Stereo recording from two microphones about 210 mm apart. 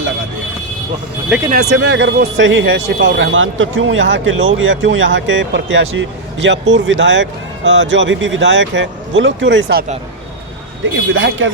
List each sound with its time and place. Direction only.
1.5 s speech: 40° right (ahead or behind)
1.7 s speech: 60° right (ahead or behind)
11.1 s speech: 65° right (ahead or behind)